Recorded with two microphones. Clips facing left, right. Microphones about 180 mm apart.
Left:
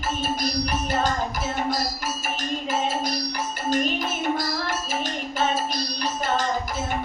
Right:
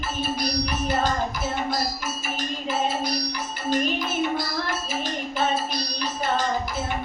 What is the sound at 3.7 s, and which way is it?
Child singing, 45° left (ahead or behind).